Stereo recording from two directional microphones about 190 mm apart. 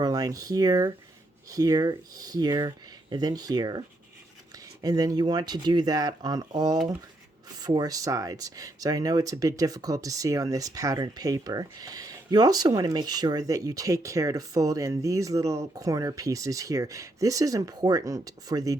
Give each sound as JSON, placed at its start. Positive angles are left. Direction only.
{"t": 0.0, "sound": "speech", "side_deg": -20}